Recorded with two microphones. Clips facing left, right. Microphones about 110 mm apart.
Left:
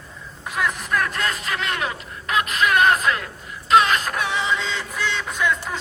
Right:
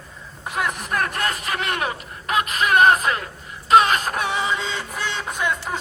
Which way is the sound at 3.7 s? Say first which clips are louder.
Right 1 dB; 45° right (ahead or behind).